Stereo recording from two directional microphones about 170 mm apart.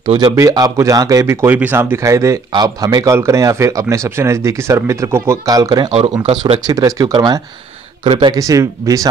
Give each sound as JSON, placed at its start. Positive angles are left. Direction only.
{"t": 0.0, "sound": "speech", "side_deg": -30}
{"t": 0.4, "sound": "speech", "side_deg": -20}
{"t": 5.9, "sound": "speech", "side_deg": -35}
{"t": 6.1, "sound": "speech", "side_deg": -25}